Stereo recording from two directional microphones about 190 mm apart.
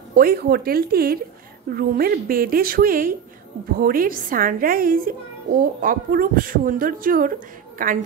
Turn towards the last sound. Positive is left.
turn(degrees=-45)  # may be behind; listen again after turning